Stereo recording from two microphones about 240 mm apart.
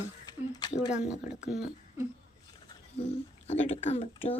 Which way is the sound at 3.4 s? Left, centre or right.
Left.